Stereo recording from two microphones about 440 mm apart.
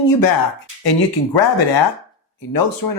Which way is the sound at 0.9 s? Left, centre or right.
Left.